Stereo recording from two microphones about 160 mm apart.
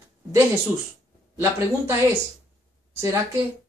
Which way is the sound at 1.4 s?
15° right (ahead or behind).